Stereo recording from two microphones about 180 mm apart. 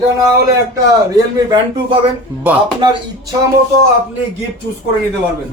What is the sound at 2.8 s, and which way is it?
Speech, 25° right (ahead or behind).